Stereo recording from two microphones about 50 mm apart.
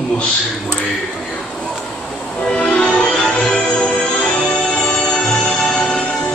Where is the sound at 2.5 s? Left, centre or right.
Left.